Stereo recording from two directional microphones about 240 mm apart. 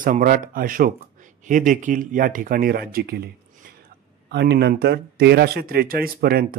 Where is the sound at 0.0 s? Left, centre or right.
Right.